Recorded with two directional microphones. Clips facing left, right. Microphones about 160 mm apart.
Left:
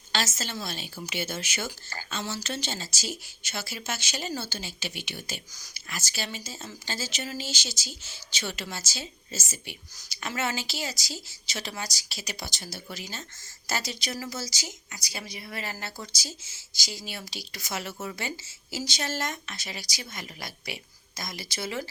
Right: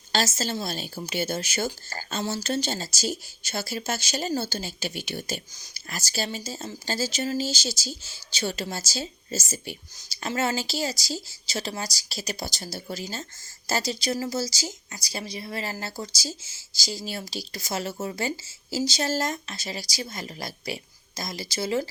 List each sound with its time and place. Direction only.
0.1 s speech: 35° right (ahead or behind)